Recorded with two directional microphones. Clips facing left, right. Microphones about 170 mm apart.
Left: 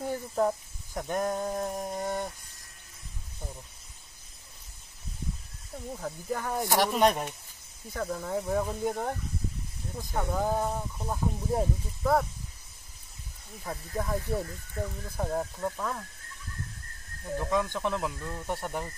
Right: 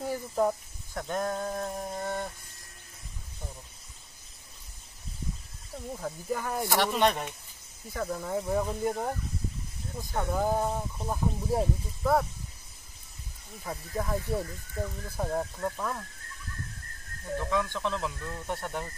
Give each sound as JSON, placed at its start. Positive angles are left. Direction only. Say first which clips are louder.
{"t": 0.0, "sound": "speech", "louder": "even", "side_deg": -5}
{"t": 0.9, "sound": "speech", "louder": "left 1 dB", "side_deg": 15}
{"t": 5.9, "sound": "speech", "louder": "right 1 dB", "side_deg": 0}
{"t": 6.6, "sound": "speech", "louder": "left 2 dB", "side_deg": 15}
{"t": 6.9, "sound": "speech", "louder": "left 2 dB", "side_deg": 5}
{"t": 10.4, "sound": "speech", "louder": "right 2 dB", "side_deg": -10}
{"t": 13.7, "sound": "speech", "louder": "even", "side_deg": 0}
{"t": 17.4, "sound": "speech", "louder": "left 1 dB", "side_deg": 15}